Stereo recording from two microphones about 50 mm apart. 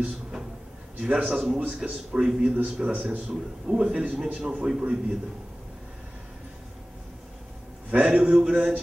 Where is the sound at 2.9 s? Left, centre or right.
Right.